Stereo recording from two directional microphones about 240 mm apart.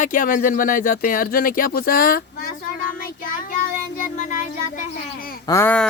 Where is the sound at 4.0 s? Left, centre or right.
Left.